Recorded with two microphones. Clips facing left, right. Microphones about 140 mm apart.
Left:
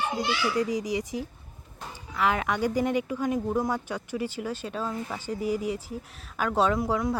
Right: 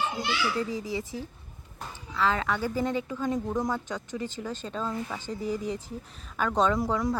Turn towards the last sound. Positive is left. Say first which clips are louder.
# left 1 dB
turn(degrees=0)  # may be behind; listen again after turning